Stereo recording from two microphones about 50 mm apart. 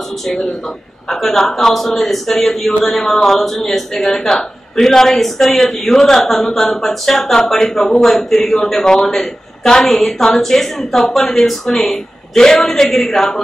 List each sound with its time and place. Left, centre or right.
1.0 s a man's voice: centre